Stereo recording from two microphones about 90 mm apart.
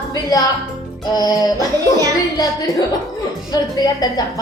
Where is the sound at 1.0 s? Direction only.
45° left (ahead or behind).